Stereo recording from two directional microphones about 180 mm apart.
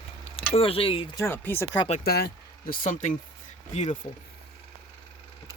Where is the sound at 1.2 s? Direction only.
10° left (ahead or behind).